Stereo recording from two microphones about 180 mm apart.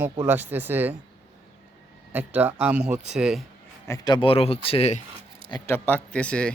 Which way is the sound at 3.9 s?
25° left (ahead or behind).